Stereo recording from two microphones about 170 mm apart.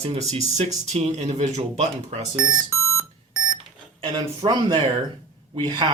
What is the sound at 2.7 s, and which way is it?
Beep, 15° left (ahead or behind).